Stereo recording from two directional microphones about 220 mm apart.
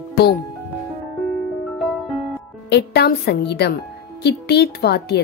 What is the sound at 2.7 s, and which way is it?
A woman's voice, 50° left (ahead or behind).